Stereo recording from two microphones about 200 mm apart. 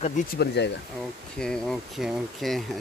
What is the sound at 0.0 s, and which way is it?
Speech, 50° left (ahead or behind).